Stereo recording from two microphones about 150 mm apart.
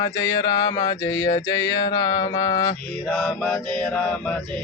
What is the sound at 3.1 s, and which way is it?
Mantra, 5° left (ahead or behind).